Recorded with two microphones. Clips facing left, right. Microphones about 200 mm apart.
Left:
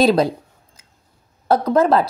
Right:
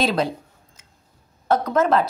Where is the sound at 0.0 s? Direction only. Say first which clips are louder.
Left 7 dB; 40° left (ahead or behind).